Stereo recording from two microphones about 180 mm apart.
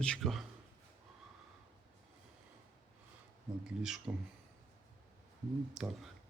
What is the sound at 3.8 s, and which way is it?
Speech, centre (ahead or behind).